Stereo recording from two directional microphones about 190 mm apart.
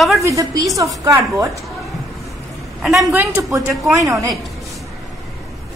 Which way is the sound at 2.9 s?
15° right (ahead or behind).